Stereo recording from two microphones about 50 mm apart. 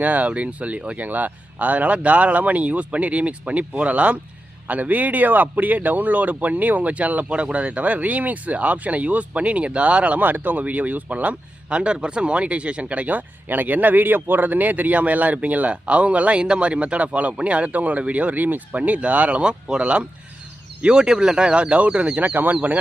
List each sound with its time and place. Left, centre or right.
0.0 s a man's voice: right
10.2 s speech: right